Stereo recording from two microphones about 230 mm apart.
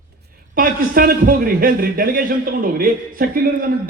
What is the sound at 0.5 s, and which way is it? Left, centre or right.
A man's voice, right.